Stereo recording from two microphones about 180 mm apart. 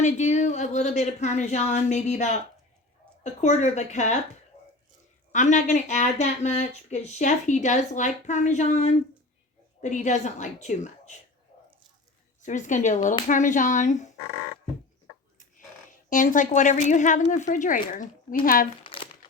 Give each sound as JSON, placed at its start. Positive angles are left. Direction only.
{"t": 0.0, "sound": "speech", "side_deg": 40}
{"t": 3.4, "sound": "speech", "side_deg": 40}
{"t": 5.3, "sound": "speech", "side_deg": 45}
{"t": 12.4, "sound": "a woman's voice", "side_deg": 45}
{"t": 16.0, "sound": "a woman's voice", "side_deg": 45}
{"t": 18.8, "sound": "crumpling", "side_deg": 30}